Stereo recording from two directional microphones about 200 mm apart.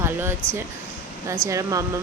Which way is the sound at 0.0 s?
10° right (ahead or behind).